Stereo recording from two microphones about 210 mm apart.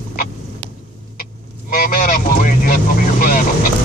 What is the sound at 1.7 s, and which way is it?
Honk, 45° left (ahead or behind).